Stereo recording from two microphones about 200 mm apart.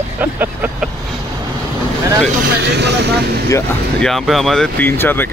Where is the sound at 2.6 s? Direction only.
60° right (ahead or behind).